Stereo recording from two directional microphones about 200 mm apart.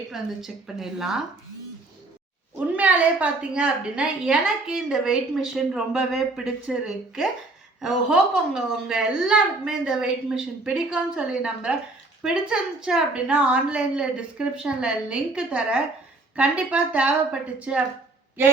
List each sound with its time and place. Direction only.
0.1 s a woman's voice: centre (ahead or behind)
2.7 s a woman's voice: 5° right (ahead or behind)